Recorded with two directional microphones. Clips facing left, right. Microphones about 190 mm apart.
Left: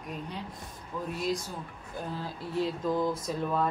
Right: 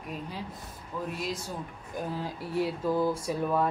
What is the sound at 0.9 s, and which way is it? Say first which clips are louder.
Speech: right 1 dB; 5° right (ahead or behind).